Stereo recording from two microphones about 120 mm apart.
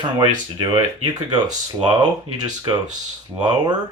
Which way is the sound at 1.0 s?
35° right (ahead or behind).